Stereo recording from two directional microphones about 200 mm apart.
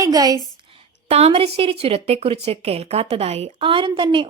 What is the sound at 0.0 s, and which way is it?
Speech, 20° right (ahead or behind).